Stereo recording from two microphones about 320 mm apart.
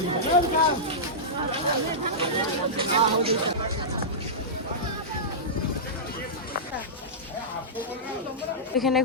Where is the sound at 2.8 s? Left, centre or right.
Centre.